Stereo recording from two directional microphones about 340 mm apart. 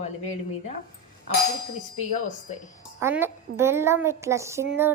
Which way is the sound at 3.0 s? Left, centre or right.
Centre.